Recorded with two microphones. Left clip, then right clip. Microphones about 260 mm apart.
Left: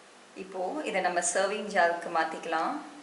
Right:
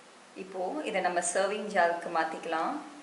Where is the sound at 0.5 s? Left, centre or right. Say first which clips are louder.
Left 1 dB; centre.